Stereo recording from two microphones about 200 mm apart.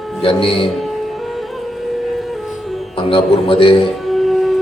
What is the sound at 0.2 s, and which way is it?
Speech, 25° left (ahead or behind).